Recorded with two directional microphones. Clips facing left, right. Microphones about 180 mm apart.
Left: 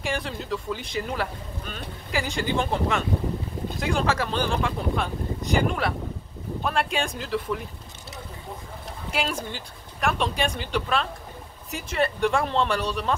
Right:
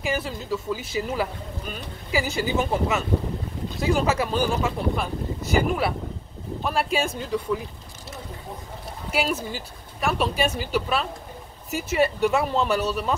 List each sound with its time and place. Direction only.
0.0 s speech: 5° right (ahead or behind)
9.1 s speech: 5° right (ahead or behind)